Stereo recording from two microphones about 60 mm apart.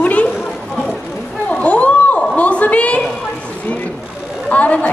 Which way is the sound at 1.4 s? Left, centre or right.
Left.